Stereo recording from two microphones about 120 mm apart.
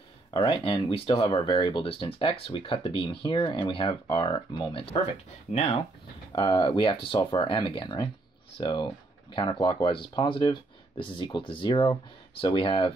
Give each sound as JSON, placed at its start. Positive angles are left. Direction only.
{"t": 0.3, "sound": "speech", "side_deg": 40}
{"t": 5.5, "sound": "speech", "side_deg": 55}
{"t": 6.3, "sound": "speech", "side_deg": 35}
{"t": 7.2, "sound": "speech", "side_deg": 30}
{"t": 7.4, "sound": "speech", "side_deg": 45}